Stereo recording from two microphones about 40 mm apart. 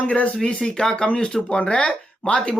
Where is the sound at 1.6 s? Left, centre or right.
Left.